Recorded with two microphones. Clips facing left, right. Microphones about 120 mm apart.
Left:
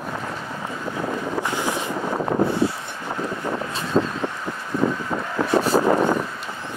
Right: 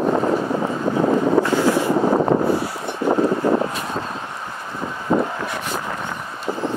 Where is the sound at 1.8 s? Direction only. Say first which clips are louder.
Right 8 dB; 60° right (ahead or behind).